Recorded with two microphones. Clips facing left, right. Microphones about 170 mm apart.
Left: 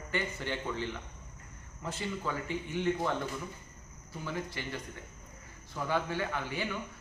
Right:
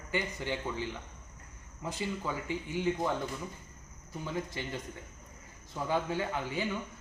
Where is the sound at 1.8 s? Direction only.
15° right (ahead or behind).